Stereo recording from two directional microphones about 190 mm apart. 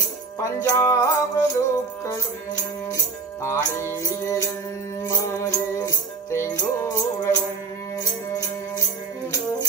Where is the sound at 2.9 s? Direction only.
15° left (ahead or behind).